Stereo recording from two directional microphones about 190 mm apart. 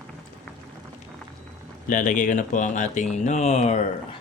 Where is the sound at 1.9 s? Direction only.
45° left (ahead or behind).